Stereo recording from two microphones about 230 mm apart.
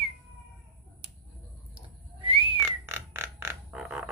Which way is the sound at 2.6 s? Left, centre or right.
Centre.